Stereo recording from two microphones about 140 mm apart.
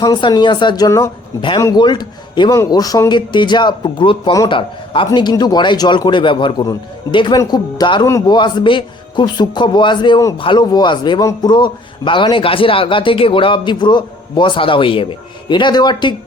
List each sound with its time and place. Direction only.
0.0 s a man's voice: 30° left (ahead or behind)
1.4 s a man's voice: 35° left (ahead or behind)